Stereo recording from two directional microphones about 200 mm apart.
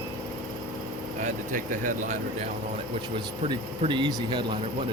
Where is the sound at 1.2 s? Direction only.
40° right (ahead or behind).